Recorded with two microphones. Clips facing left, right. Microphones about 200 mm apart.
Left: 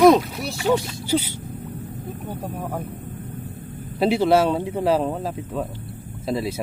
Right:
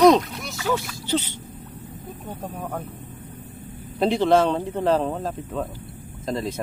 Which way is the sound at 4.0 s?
10° left (ahead or behind).